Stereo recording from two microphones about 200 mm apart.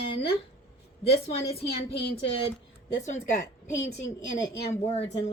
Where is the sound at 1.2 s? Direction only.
30° left (ahead or behind).